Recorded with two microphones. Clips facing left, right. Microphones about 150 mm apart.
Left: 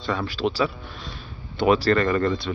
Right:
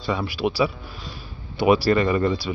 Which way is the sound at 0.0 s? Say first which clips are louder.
Right 1 dB; 5° right (ahead or behind).